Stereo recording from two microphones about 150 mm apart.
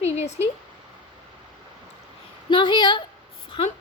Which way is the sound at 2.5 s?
35° left (ahead or behind).